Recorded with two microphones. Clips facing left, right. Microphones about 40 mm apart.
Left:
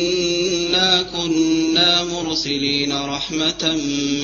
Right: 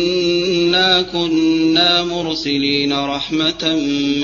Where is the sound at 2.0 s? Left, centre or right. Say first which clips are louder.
Right 3 dB; right.